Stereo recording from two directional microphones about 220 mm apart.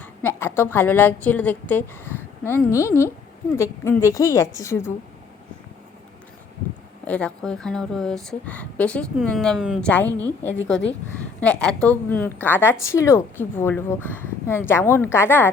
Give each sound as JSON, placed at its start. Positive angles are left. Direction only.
{"t": 0.0, "sound": "a woman's voice", "side_deg": 10}
{"t": 7.1, "sound": "a woman's voice", "side_deg": 5}